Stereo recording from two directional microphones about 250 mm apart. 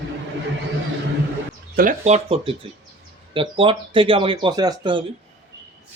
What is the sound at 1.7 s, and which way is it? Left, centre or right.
Speech, right.